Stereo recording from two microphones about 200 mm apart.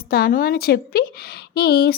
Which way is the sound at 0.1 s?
45° left (ahead or behind).